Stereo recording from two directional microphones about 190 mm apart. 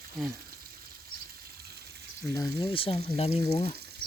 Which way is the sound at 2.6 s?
30° left (ahead or behind).